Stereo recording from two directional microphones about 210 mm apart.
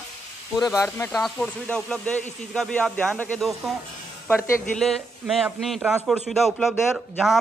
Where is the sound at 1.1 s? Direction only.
Centre (ahead or behind).